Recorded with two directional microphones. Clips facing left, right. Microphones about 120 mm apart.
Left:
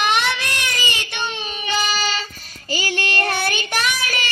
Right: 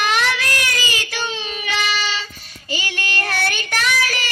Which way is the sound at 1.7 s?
35° left (ahead or behind).